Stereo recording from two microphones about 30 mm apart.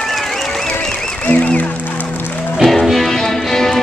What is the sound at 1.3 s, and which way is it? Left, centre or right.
Music, left.